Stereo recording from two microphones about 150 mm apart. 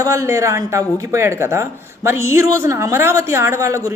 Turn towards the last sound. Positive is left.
turn(degrees=-20)  # may be behind; listen again after turning